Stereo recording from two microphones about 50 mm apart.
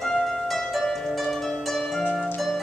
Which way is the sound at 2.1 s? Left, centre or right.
Centre.